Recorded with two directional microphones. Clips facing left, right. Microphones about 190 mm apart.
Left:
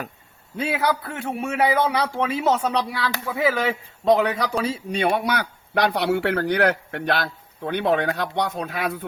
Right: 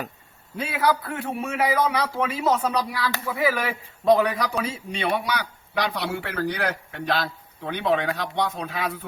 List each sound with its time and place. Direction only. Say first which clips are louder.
0.5 s a man's voice: left 1 dB; 25° left (ahead or behind); by 8.5 s 55° left (ahead or behind)